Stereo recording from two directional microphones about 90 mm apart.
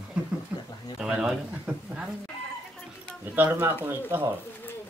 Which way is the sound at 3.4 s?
25° right (ahead or behind).